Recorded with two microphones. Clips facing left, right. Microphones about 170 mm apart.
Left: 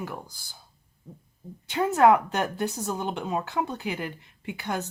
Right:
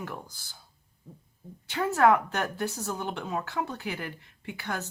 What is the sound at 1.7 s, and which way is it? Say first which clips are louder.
Speech: left 3 dB; 20° left (ahead or behind).